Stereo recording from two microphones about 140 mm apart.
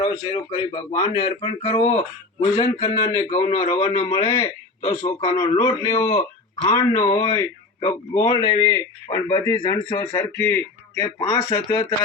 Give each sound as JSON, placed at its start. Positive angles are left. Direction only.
{"t": 0.0, "sound": "speech", "side_deg": 40}
{"t": 3.2, "sound": "a man's voice", "side_deg": 50}
{"t": 3.5, "sound": "a man's voice", "side_deg": 35}
{"t": 6.1, "sound": "speech", "side_deg": 40}
{"t": 6.7, "sound": "speech", "side_deg": 25}
{"t": 9.6, "sound": "speech", "side_deg": 35}
{"t": 10.4, "sound": "speech", "side_deg": 15}
{"t": 11.2, "sound": "speech", "side_deg": 30}